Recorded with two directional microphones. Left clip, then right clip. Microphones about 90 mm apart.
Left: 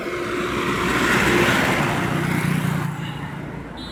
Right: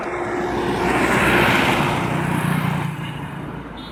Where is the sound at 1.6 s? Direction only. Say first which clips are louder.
Right 2 dB; 85° right.